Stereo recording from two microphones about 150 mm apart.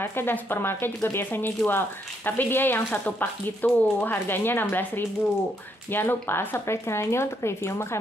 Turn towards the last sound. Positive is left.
turn(degrees=15)  # may be behind; listen again after turning